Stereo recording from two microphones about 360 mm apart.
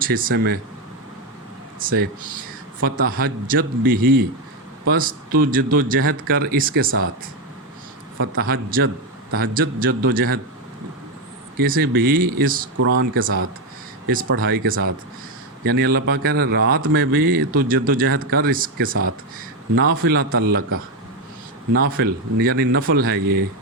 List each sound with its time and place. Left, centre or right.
0.0 s speech: right
1.8 s speech: right
8.2 s speech: right
11.5 s speech: right
12.7 s speech: right
21.9 s speech: right